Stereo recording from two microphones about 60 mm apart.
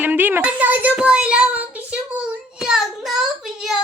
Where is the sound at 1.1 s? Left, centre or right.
Centre.